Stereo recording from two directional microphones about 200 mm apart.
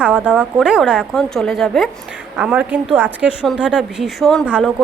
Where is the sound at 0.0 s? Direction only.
5° right (ahead or behind).